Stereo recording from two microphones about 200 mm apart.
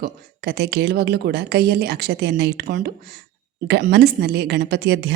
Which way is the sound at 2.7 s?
40° right (ahead or behind).